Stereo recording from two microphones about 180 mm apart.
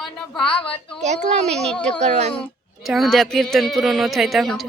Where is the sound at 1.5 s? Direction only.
5° left (ahead or behind).